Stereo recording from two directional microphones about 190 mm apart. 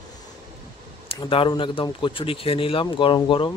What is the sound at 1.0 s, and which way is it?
Speech, 25° left (ahead or behind).